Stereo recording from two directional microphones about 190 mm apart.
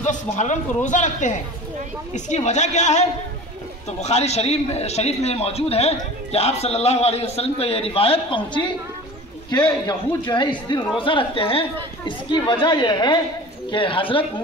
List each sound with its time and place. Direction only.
0.0 s a man's voice: 40° left (ahead or behind)
9.5 s a man's voice: 20° left (ahead or behind)